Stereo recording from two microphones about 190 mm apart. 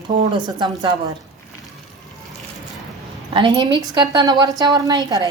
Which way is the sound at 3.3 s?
25° right (ahead or behind).